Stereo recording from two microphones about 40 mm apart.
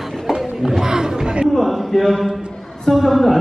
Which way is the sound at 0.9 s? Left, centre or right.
Centre.